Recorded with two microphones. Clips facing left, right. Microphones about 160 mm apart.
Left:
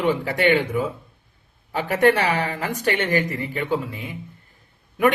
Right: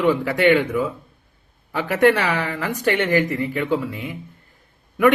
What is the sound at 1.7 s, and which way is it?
Speech, 40° left (ahead or behind).